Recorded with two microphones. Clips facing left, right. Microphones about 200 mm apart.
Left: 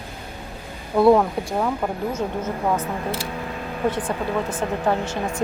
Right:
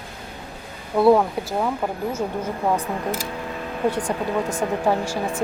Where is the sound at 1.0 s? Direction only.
5° right (ahead or behind).